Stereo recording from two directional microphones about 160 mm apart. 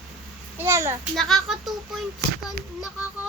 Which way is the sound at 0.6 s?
15° right (ahead or behind).